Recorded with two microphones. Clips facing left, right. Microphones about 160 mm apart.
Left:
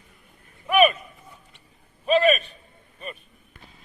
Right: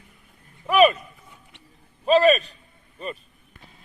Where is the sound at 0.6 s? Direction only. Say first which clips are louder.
Right 2 dB; 35° right (ahead or behind).